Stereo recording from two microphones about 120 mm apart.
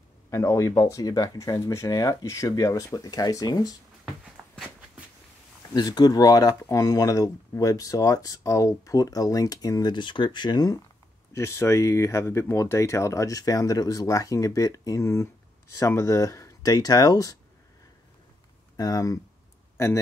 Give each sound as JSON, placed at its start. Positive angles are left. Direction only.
{"t": 0.3, "sound": "speech", "side_deg": 25}
{"t": 4.4, "sound": "walk", "side_deg": -10}
{"t": 5.7, "sound": "speech", "side_deg": 35}
{"t": 11.3, "sound": "speech", "side_deg": 20}
{"t": 18.8, "sound": "speech", "side_deg": 30}